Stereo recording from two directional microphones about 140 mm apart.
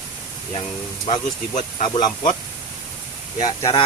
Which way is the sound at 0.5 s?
35° left (ahead or behind).